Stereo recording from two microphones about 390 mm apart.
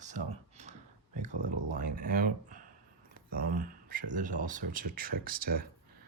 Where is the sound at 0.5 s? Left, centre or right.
Centre.